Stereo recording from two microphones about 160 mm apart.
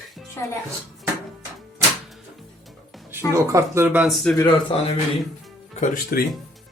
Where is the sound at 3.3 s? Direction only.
20° right (ahead or behind).